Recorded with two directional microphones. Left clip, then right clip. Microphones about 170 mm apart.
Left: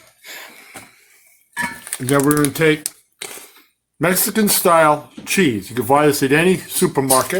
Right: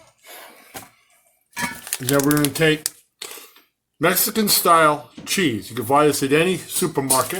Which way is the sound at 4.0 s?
70° left (ahead or behind).